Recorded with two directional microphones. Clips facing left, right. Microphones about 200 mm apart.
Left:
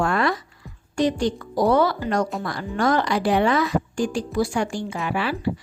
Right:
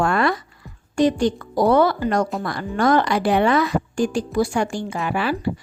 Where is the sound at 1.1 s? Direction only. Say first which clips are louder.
Right 3 dB; 55° right (ahead or behind).